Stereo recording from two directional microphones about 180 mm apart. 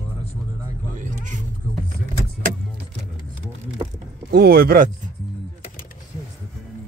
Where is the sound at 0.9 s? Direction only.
45° right (ahead or behind).